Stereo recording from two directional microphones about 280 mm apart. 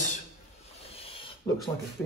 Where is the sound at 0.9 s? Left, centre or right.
Centre.